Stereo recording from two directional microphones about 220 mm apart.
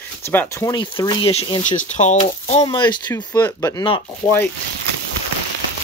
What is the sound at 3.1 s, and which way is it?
Speech, 10° left (ahead or behind).